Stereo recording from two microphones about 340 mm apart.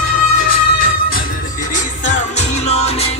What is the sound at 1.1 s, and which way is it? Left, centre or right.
Music, left.